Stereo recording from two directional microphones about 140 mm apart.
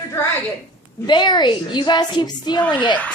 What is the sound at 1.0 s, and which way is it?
A woman's voice, 30° left (ahead or behind).